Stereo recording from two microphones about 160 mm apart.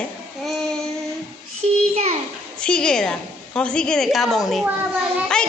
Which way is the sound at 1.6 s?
40° right (ahead or behind).